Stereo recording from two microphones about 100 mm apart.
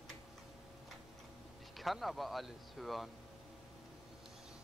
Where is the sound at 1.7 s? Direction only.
Centre (ahead or behind).